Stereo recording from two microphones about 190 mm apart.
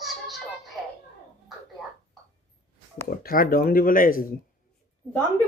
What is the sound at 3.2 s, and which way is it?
Speech, 50° left (ahead or behind).